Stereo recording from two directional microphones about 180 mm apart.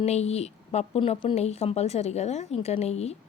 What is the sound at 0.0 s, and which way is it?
Speech, 35° left (ahead or behind).